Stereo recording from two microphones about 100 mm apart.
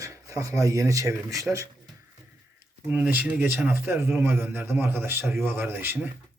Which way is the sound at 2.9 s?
15° right (ahead or behind).